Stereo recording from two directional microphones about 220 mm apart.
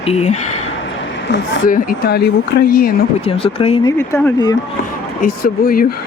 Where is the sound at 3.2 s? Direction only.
25° left (ahead or behind).